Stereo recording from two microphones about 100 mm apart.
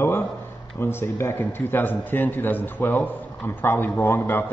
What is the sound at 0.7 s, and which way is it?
Speech, 25° left (ahead or behind).